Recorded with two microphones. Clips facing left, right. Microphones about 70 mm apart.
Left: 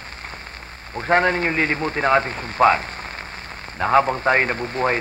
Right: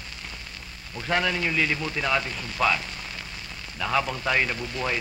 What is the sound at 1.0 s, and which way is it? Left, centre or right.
A man's voice, left.